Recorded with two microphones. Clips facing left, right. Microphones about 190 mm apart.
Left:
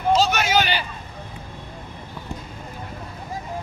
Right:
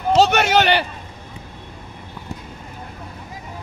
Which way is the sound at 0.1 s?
65° right (ahead or behind).